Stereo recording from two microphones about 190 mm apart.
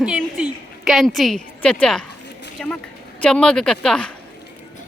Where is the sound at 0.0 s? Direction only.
5° right (ahead or behind).